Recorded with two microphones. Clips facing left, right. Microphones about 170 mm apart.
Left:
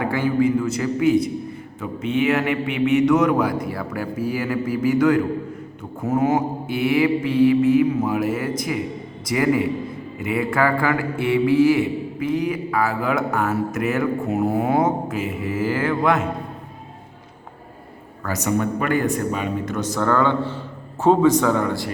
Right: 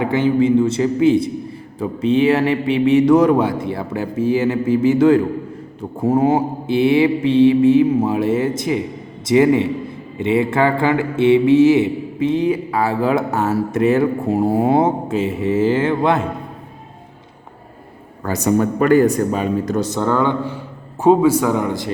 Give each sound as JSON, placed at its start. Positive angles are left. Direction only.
{"t": 0.0, "sound": "mantra", "side_deg": -20}
{"t": 18.2, "sound": "speech", "side_deg": -30}
{"t": 20.0, "sound": "a man's voice", "side_deg": -15}